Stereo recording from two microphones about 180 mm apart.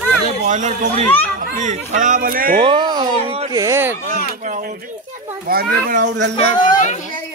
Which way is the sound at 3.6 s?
15° right (ahead or behind).